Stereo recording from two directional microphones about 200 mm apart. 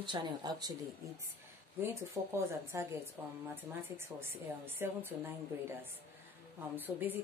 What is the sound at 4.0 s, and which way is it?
Speech, 10° right (ahead or behind).